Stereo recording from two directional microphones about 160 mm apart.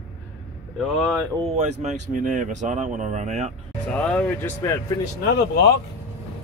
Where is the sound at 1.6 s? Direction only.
45° right (ahead or behind).